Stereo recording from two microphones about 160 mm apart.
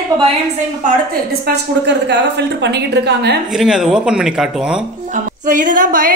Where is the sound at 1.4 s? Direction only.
90° right.